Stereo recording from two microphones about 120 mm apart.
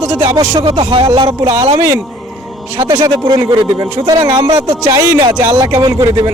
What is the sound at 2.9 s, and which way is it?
Speech, 40° right (ahead or behind).